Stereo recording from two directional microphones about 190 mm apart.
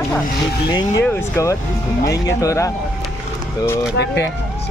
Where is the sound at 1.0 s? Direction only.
10° left (ahead or behind).